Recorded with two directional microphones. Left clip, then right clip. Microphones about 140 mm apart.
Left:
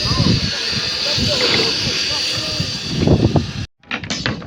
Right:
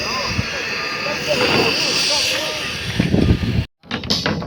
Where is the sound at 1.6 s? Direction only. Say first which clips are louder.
Right 1 dB; 90° left; by 3.2 s 50° left (ahead or behind).